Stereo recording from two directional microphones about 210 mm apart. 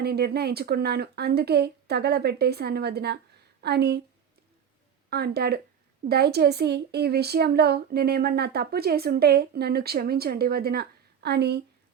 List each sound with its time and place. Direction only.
0.0 s speech: 50° right (ahead or behind)
5.1 s speech: 50° right (ahead or behind)